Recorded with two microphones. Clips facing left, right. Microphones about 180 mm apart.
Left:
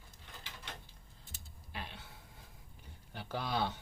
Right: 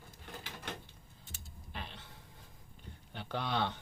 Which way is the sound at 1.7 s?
5° left (ahead or behind).